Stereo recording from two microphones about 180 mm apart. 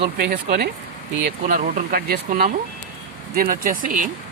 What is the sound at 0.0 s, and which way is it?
Speech, 60° right (ahead or behind).